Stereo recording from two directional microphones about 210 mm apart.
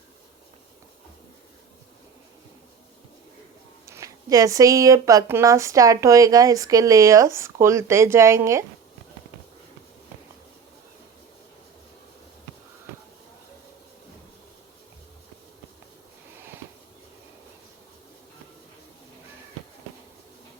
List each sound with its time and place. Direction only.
3.8 s speech: 15° right (ahead or behind)